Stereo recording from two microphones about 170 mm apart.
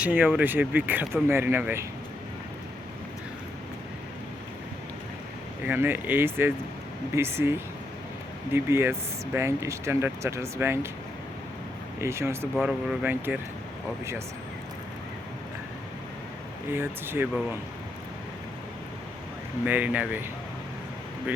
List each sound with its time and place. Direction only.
0.0 s speech: 10° right (ahead or behind)
5.6 s speech: 10° right (ahead or behind)
11.9 s speech: 15° right (ahead or behind)
12.5 s speech: centre (ahead or behind)
16.7 s speech: 10° right (ahead or behind)
19.6 s speech: 10° right (ahead or behind)